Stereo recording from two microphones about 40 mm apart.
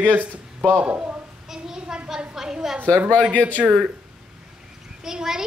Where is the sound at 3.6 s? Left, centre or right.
Centre.